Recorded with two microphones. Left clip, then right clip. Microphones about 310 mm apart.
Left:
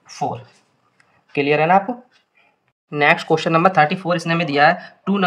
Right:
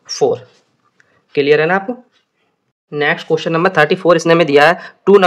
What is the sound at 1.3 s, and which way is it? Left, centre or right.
Speech, centre.